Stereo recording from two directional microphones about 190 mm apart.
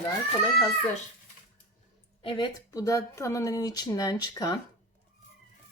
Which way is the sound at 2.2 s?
25° left (ahead or behind).